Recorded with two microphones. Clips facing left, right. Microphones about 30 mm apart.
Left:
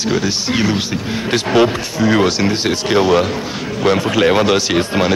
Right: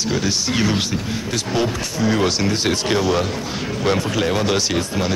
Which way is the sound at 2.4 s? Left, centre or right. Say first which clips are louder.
Left 3 dB; centre.